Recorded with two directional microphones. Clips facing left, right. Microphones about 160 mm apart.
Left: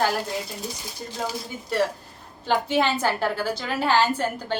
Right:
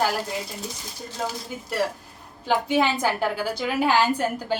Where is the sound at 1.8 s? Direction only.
10° right (ahead or behind).